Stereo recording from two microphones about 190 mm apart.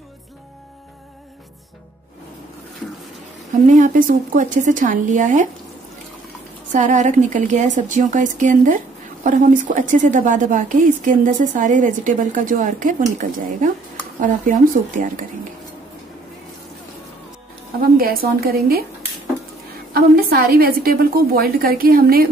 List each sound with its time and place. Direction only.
3.6 s a woman's voice: 40° right (ahead or behind)
6.7 s a woman's voice: 40° right (ahead or behind)
14.2 s a woman's voice: 45° right (ahead or behind)
17.9 s a woman's voice: 50° right (ahead or behind)
19.9 s a woman's voice: 55° right (ahead or behind)